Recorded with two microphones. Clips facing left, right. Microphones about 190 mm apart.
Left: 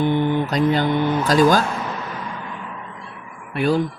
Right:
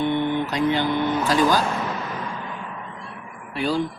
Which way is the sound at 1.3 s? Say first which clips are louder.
Left 5 dB; 45° left (ahead or behind).